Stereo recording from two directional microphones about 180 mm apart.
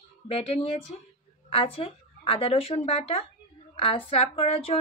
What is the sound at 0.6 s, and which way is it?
Speech, 30° left (ahead or behind).